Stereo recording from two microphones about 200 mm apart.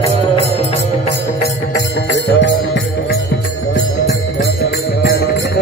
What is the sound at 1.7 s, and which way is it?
Music, 55° left (ahead or behind).